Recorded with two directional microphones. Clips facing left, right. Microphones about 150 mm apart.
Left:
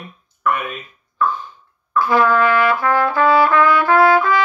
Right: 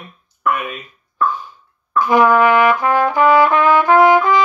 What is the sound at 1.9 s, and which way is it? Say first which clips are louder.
Trumpet: right 3 dB; 15° right (ahead or behind).